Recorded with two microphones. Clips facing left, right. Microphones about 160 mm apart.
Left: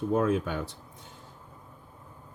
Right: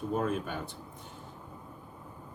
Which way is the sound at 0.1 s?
90° left.